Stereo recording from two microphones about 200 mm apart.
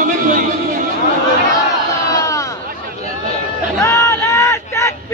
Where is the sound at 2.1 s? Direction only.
15° left (ahead or behind).